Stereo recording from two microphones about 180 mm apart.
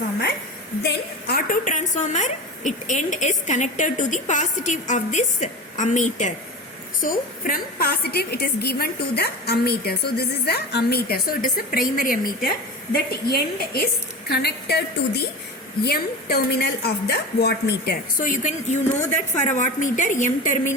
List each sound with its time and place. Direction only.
0.8 s a woman's voice: 60° left (ahead or behind)
13.2 s a woman's voice: 65° left (ahead or behind); by 20.7 s 45° left (ahead or behind)